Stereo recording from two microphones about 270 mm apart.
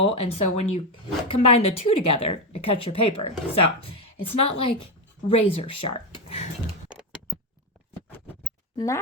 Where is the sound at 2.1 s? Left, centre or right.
Left.